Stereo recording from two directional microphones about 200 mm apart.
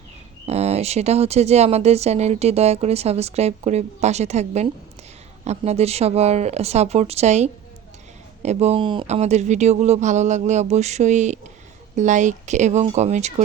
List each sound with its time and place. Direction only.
0.4 s speech: 30° right (ahead or behind)